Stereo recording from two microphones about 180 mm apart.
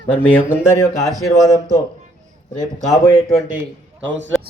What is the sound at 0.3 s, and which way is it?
Speech, 15° left (ahead or behind).